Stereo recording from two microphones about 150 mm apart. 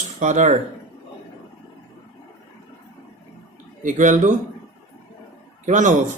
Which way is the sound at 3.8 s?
55° right (ahead or behind).